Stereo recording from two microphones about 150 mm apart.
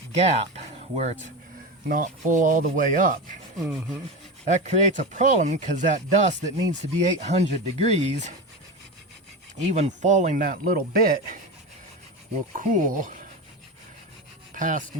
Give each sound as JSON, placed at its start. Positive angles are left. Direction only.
{"t": 0.1, "sound": "speech", "side_deg": -50}
{"t": 1.9, "sound": "speech", "side_deg": -65}
{"t": 3.6, "sound": "speech", "side_deg": 0}
{"t": 4.4, "sound": "speech", "side_deg": -50}
{"t": 9.7, "sound": "speech", "side_deg": -55}
{"t": 12.5, "sound": "speech", "side_deg": -60}
{"t": 14.5, "sound": "rub", "side_deg": -60}